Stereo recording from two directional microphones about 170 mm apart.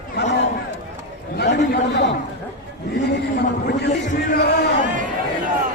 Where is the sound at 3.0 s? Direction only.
80° left.